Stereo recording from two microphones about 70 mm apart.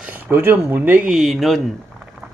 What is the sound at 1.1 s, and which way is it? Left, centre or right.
Speech, centre.